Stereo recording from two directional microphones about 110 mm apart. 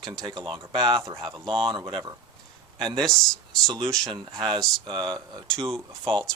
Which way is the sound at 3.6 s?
40° right (ahead or behind).